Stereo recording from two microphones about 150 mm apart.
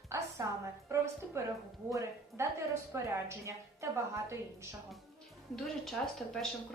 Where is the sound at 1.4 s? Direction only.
20° right (ahead or behind).